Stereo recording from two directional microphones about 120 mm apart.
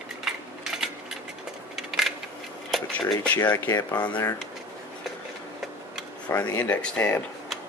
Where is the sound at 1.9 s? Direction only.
Centre (ahead or behind).